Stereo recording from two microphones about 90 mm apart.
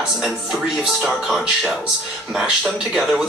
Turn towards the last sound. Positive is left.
turn(degrees=-5)  # may be behind; listen again after turning